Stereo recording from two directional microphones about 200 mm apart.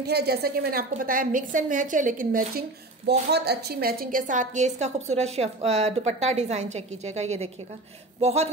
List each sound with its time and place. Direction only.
0.0 s a woman's voice: 55° right (ahead or behind)
3.1 s a woman's voice: 55° right (ahead or behind); by 8.5 s 35° right (ahead or behind)